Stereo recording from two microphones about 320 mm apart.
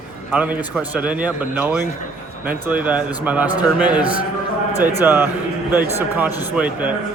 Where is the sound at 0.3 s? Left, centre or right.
Centre.